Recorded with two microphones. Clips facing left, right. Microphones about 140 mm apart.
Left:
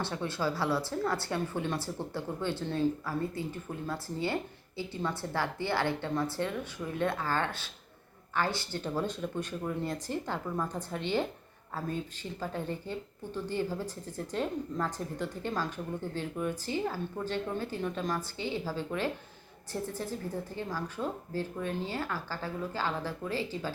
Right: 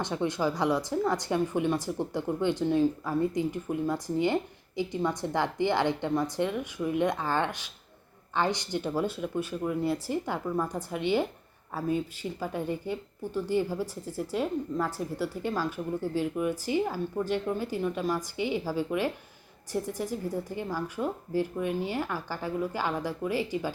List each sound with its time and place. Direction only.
0.0 s speech: 15° right (ahead or behind)